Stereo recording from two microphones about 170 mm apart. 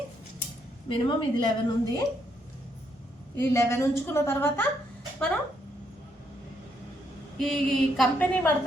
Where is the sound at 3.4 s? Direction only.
15° left (ahead or behind).